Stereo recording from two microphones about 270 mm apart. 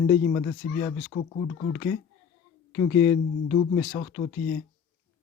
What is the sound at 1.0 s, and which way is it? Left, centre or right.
Speech, left.